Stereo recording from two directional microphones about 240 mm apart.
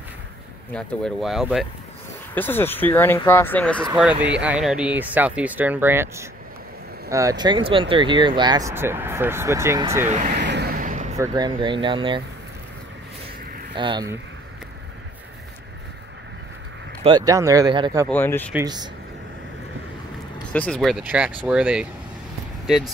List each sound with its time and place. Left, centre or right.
0.7 s speech: centre
10.0 s speech: right
10.3 s vehicle: right
11.1 s speech: centre
13.7 s speech: centre
17.0 s speech: centre
18.0 s speech: centre
18.5 s speech: centre
20.5 s speech: centre